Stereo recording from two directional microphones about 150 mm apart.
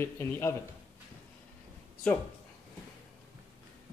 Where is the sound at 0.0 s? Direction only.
20° left (ahead or behind).